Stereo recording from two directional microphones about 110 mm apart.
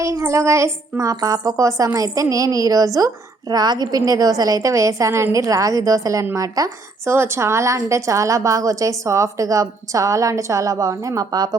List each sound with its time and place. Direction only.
0.0 s a child's voice: 30° right (ahead or behind)